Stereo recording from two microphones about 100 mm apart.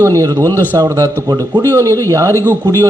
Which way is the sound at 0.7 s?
30° right (ahead or behind).